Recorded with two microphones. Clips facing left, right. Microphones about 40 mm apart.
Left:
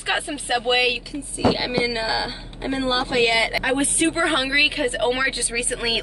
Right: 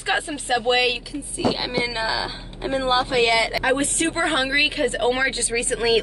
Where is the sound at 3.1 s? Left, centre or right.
Centre.